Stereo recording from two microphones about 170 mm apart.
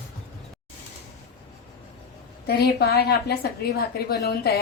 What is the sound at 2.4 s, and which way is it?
A woman's voice, 70° left (ahead or behind).